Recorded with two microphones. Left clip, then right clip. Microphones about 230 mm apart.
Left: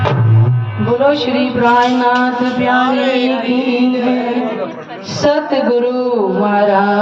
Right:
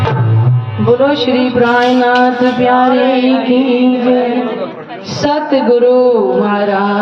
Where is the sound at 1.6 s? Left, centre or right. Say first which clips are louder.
Even; right.